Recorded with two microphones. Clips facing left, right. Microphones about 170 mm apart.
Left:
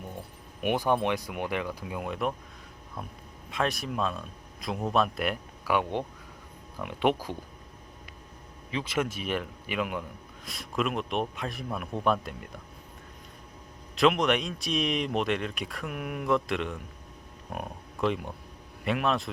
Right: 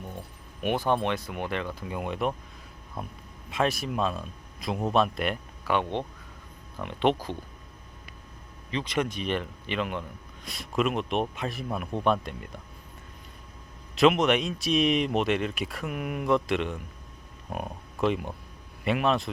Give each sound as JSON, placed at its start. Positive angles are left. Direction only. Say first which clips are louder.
{"t": 0.6, "sound": "speech", "louder": "even", "side_deg": 15}
{"t": 3.5, "sound": "speech", "louder": "right 3 dB", "side_deg": 0}
{"t": 8.7, "sound": "speech", "louder": "right 1 dB", "side_deg": 5}
{"t": 13.9, "sound": "speech", "louder": "right 2 dB", "side_deg": 0}